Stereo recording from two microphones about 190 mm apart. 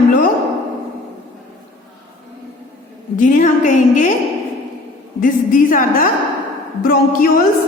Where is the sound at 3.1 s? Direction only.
40° left (ahead or behind).